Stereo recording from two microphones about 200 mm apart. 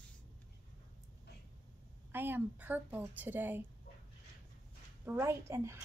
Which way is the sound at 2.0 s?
10° right (ahead or behind).